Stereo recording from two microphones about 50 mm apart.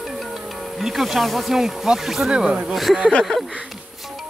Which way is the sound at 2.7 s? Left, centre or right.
Centre.